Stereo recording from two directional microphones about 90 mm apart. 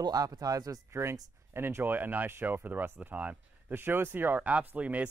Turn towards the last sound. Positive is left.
turn(degrees=-15)  # may be behind; listen again after turning